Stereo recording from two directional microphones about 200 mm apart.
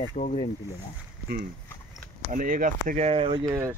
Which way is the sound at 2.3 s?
40° right (ahead or behind).